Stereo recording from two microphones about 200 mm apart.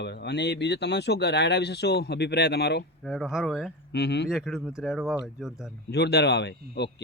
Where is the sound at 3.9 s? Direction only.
55° left (ahead or behind).